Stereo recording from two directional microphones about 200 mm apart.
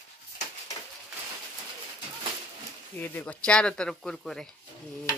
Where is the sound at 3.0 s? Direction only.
10° left (ahead or behind).